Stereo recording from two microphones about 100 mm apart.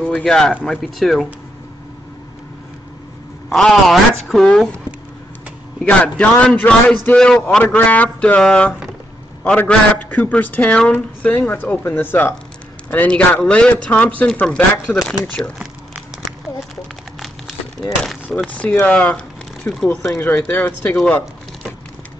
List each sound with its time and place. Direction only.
0.2 s a woman's voice: 5° left (ahead or behind)
3.4 s a woman's voice: 5° left (ahead or behind)
5.9 s a man's voice: 15° left (ahead or behind)
15.6 s a sound: 10° right (ahead or behind)
18.5 s a man's voice: 15° left (ahead or behind)
20.3 s a man's voice: 15° left (ahead or behind)